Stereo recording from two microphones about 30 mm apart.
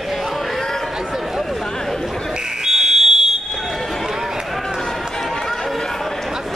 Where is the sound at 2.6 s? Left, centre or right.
Centre.